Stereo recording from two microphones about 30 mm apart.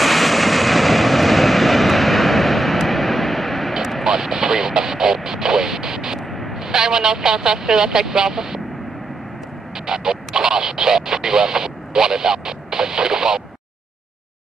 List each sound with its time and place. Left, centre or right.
0.0 s vehicle: centre
4.0 s a sound: centre
6.1 s vehicle: centre
6.5 s speech: centre
9.8 s speech: right